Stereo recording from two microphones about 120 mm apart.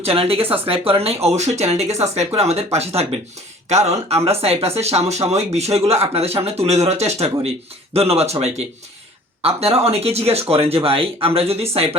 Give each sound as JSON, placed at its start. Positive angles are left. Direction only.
{"t": 0.0, "sound": "speech", "side_deg": -55}